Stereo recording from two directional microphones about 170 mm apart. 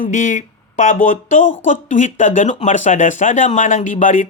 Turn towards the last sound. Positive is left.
turn(degrees=50)  # may be behind; listen again after turning